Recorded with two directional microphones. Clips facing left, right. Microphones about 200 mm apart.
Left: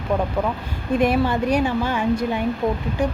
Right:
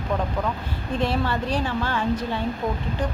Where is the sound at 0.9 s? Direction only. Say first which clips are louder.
Left 6 dB; 15° left (ahead or behind).